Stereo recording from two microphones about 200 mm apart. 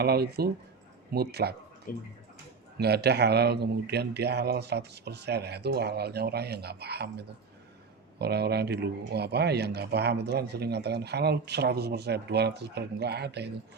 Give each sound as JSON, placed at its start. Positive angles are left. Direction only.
{"t": 0.0, "sound": "speech", "side_deg": -50}
{"t": 1.9, "sound": "speech", "side_deg": 45}
{"t": 2.7, "sound": "speech", "side_deg": -55}